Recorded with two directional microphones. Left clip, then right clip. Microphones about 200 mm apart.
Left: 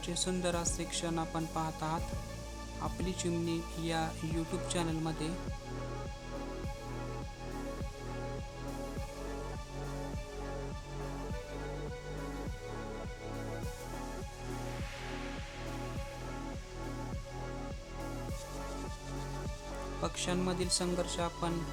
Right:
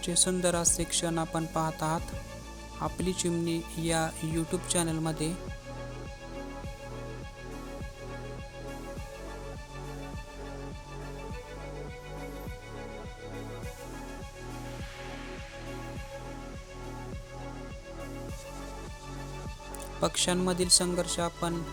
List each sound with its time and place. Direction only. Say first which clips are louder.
0.0 s speech: right 7 dB; 25° right (ahead or behind)
20.0 s speech: right 8 dB; 30° right (ahead or behind)